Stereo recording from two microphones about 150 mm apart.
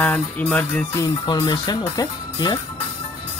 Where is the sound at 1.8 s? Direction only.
25° left (ahead or behind).